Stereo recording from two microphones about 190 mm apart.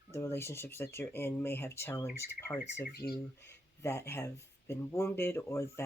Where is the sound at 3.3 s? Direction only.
15° left (ahead or behind).